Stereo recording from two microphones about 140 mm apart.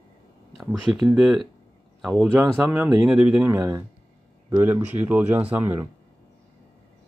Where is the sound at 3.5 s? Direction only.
25° right (ahead or behind).